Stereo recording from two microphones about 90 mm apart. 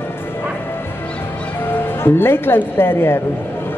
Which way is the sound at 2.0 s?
25° left (ahead or behind).